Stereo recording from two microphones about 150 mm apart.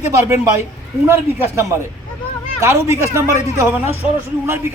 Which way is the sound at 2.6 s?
15° right (ahead or behind).